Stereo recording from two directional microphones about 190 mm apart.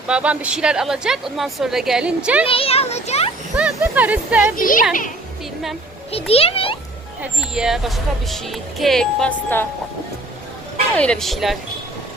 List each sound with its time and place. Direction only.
0.1 s speech: 5° right (ahead or behind)
2.5 s a child's voice: 30° left (ahead or behind)
3.5 s speech: 5° right (ahead or behind)
4.5 s speech: 45° left (ahead or behind)
6.1 s a child's voice: 30° left (ahead or behind)
7.2 s speech: 5° right (ahead or behind)
10.9 s speech: 5° left (ahead or behind)